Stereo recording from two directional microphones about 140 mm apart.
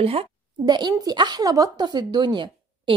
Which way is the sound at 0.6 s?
30° right (ahead or behind).